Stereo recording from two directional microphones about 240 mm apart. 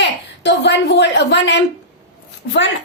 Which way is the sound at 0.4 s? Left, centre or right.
Left.